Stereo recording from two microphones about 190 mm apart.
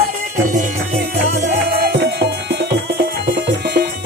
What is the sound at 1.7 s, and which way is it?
Music, 60° right (ahead or behind).